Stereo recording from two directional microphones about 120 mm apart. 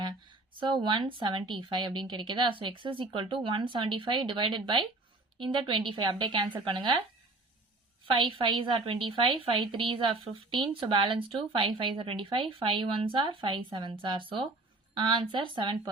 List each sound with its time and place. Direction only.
0.0 s a woman's voice: 40° right (ahead or behind)
8.1 s speech: 45° right (ahead or behind)